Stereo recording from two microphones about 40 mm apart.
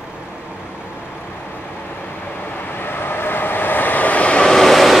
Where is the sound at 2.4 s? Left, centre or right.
Left.